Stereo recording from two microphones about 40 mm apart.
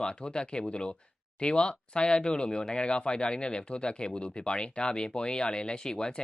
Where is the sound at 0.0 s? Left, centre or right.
Left.